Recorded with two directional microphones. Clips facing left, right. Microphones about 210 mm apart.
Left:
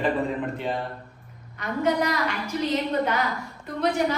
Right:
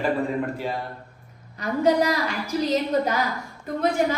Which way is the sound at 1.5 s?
35° right (ahead or behind).